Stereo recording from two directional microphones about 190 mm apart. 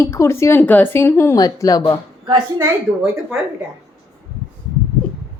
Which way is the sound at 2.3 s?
15° right (ahead or behind).